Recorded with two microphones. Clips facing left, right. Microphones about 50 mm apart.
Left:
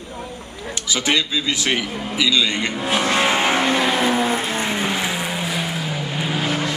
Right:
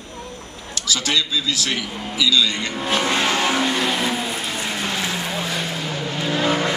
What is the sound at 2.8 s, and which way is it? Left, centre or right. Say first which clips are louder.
Vehicle: left 1 dB; centre.